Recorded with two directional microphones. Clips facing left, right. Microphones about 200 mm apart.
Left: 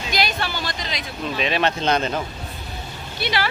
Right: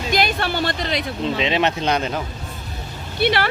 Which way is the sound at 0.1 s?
55° right (ahead or behind).